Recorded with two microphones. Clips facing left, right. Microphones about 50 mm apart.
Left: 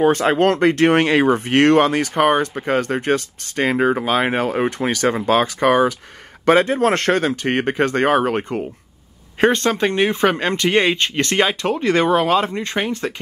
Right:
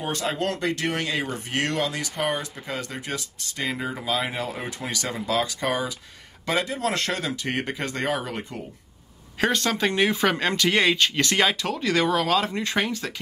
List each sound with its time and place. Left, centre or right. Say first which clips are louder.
0.0 s speech: left 12 dB; left
9.4 s speech: left 8 dB; left
9.7 s speech: left 5 dB; left
11.7 s speech: left 6 dB; left